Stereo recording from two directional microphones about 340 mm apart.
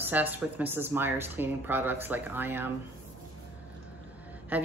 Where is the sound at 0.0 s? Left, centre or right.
Centre.